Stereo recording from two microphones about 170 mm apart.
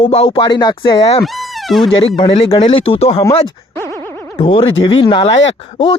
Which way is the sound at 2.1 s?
30° left (ahead or behind).